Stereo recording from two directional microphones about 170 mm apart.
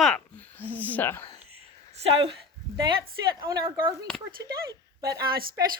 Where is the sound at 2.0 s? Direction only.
30° right (ahead or behind).